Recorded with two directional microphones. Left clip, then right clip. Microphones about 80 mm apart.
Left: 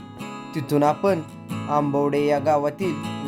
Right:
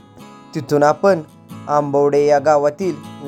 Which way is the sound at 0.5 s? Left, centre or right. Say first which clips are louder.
Right 6 dB; right.